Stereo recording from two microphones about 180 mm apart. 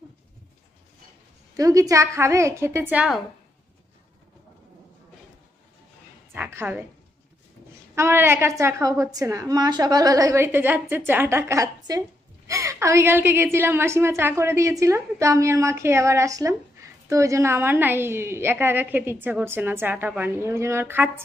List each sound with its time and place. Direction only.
1.6 s a woman's voice: 20° right (ahead or behind)
6.3 s a sound: 10° right (ahead or behind)
7.9 s a woman's voice: 15° right (ahead or behind)